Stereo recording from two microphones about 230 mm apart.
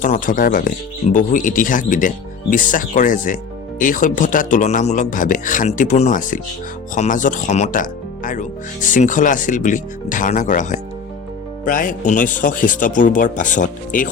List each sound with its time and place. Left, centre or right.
0.0 s speech: left